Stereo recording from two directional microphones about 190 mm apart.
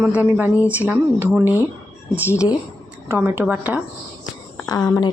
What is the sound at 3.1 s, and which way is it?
Speech, 10° right (ahead or behind).